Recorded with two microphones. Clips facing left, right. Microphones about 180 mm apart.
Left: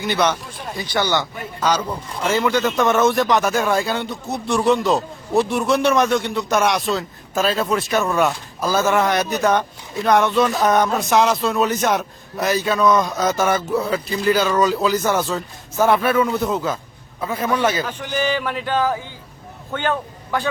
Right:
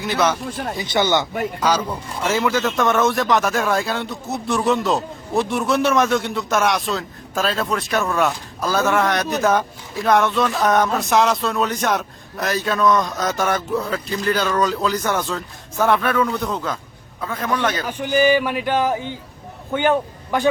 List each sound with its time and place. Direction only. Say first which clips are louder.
0.0 s a man's voice: even; centre (ahead or behind)
0.8 s speech: right 1 dB; 20° right (ahead or behind)
1.6 s a man's voice: left 2 dB; 10° right (ahead or behind); by 17.8 s 10° left (ahead or behind)
17.8 s speech: right 5 dB; 15° right (ahead or behind)